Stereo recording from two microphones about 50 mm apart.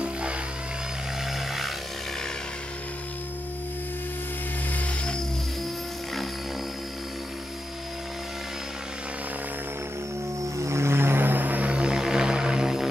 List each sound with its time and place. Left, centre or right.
0.0 s music: right
10.6 s a sound: right
11.7 s music: centre